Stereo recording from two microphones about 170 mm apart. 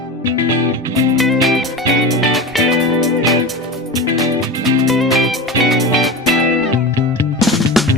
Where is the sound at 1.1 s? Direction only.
Centre (ahead or behind).